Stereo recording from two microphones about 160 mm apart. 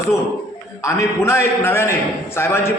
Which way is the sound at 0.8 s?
20° left (ahead or behind).